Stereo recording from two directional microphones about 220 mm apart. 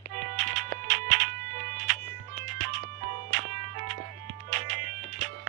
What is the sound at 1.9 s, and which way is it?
Music, 35° right (ahead or behind).